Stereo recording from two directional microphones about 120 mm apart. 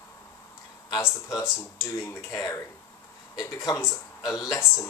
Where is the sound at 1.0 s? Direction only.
25° left (ahead or behind).